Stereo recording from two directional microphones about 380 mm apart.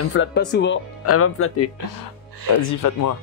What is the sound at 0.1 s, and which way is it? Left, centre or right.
Speech, left.